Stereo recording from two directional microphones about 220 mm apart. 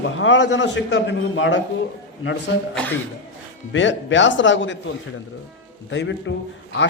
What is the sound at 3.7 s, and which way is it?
A man's voice, 55° left (ahead or behind).